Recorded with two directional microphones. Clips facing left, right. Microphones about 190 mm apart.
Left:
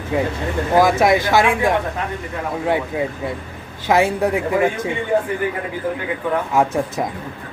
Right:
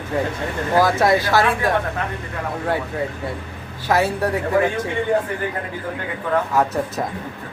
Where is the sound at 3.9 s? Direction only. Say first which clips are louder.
Left 3 dB; 15° left (ahead or behind).